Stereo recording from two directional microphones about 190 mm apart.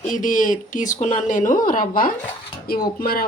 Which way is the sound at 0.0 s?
45° left (ahead or behind).